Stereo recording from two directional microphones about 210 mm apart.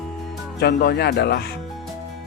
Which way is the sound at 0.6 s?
50° left (ahead or behind).